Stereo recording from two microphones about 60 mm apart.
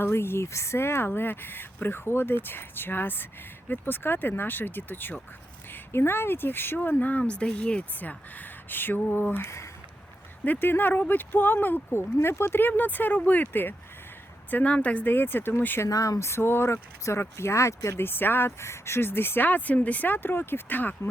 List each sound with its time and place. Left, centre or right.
0.0 s speech: left
14.5 s speech: left
15.0 s speech: left
15.9 s speech: left
18.0 s speech: left